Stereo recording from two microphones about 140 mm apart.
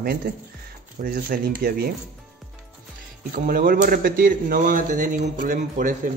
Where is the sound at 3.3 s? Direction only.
90° right; by 6.0 s 70° right (ahead or behind).